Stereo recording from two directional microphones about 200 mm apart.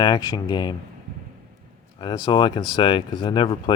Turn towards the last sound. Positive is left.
turn(degrees=25)  # may be behind; listen again after turning